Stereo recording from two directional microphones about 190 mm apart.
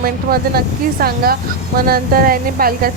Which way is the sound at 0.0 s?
50° right (ahead or behind).